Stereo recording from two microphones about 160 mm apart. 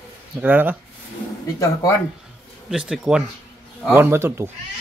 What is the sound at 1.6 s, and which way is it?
Speech, 20° left (ahead or behind).